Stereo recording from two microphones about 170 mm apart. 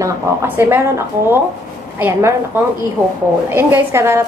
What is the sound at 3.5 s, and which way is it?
Speech, 15° right (ahead or behind).